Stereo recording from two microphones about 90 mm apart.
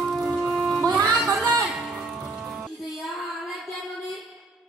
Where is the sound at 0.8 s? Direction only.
45° right (ahead or behind).